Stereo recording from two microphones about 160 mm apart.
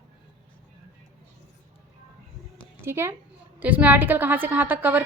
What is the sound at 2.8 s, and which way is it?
A woman's voice, 15° right (ahead or behind).